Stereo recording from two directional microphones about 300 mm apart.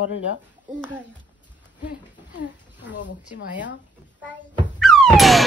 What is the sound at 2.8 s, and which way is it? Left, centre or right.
Speech, left.